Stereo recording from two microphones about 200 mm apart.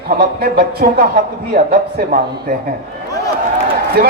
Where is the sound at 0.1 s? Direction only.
45° right (ahead or behind).